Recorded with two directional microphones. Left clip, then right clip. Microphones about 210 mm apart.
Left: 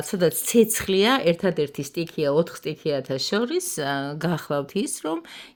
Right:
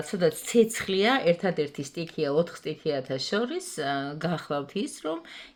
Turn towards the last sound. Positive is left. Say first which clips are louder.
# left 4 dB
turn(degrees=45)  # may be behind; listen again after turning